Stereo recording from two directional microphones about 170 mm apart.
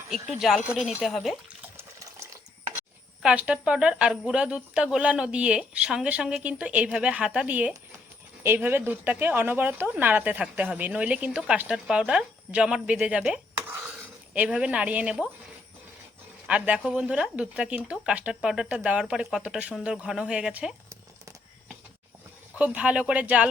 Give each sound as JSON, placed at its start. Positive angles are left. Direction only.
{"t": 0.1, "sound": "speech", "side_deg": 0}
{"t": 1.7, "sound": "water", "side_deg": -20}
{"t": 3.2, "sound": "speech", "side_deg": -5}
{"t": 16.5, "sound": "speech", "side_deg": -5}
{"t": 22.5, "sound": "speech", "side_deg": -10}